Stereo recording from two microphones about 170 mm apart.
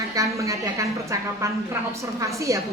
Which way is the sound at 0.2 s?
20° right (ahead or behind).